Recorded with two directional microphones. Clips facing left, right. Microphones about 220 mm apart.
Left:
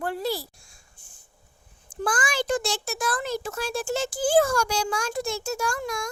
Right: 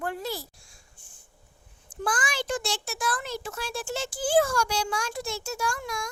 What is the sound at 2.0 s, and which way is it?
A child's voice, 50° left (ahead or behind).